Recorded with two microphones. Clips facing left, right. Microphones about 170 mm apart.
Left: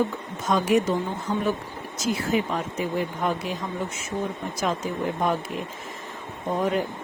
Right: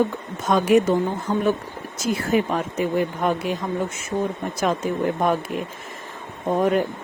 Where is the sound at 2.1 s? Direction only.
55° right (ahead or behind).